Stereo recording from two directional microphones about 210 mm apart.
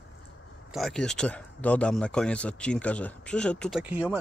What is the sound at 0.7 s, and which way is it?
Speech, centre (ahead or behind).